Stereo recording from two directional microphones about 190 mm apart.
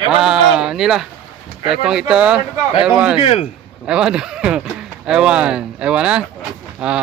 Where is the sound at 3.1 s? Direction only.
30° left (ahead or behind).